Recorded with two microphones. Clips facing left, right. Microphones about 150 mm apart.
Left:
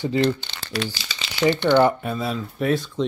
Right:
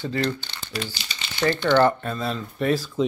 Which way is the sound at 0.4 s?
90° left.